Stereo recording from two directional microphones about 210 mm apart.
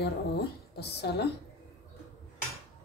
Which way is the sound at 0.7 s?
50° left (ahead or behind).